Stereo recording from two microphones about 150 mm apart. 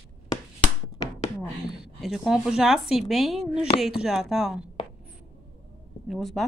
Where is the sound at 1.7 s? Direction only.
Centre (ahead or behind).